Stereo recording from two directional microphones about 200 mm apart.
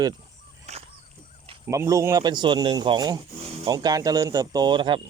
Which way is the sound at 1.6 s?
15° right (ahead or behind).